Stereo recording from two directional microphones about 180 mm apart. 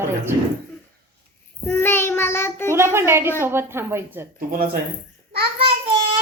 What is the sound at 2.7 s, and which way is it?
A child's voice, 15° right (ahead or behind).